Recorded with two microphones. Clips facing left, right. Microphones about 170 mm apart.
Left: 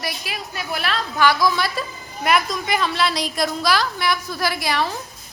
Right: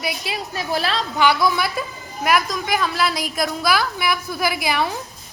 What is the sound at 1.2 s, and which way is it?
Speech, 15° right (ahead or behind).